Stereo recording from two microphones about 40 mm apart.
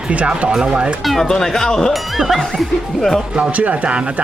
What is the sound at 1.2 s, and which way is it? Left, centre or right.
Speech, centre.